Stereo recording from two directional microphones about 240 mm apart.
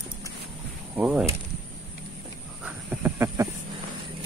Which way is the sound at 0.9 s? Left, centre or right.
Centre.